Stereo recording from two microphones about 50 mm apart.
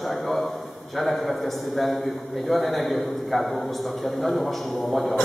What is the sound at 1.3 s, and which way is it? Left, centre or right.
A man's voice, centre.